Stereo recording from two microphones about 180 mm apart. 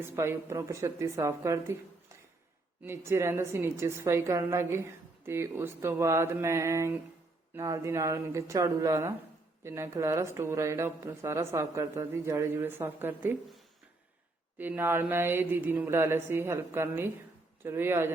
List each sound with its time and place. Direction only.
0.0 s a woman's voice: 15° right (ahead or behind)
2.8 s a woman's voice: 15° right (ahead or behind)
14.6 s a woman's voice: 15° right (ahead or behind)